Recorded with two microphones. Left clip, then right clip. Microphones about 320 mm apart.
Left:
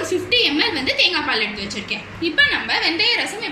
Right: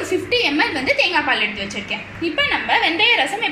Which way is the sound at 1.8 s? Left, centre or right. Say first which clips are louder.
Even; centre.